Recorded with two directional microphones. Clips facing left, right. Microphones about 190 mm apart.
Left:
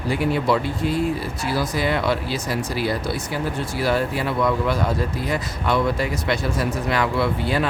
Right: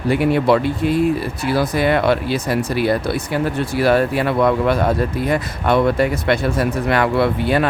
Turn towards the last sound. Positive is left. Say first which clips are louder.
# right 5 dB
turn(degrees=-60)  # may be behind; listen again after turning